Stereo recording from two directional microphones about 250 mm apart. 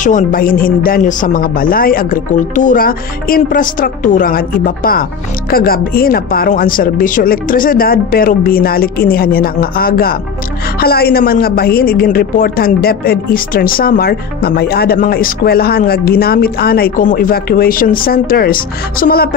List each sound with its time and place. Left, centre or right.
0.0 s a woman's voice: left